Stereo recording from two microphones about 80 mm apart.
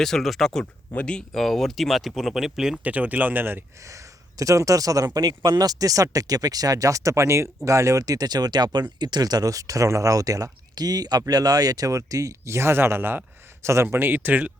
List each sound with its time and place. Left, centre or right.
0.0 s speech: centre
0.6 s speech: centre
1.3 s speech: centre
2.8 s speech: centre
3.8 s speech: right